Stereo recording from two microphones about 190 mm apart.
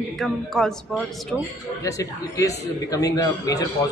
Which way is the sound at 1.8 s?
15° left (ahead or behind).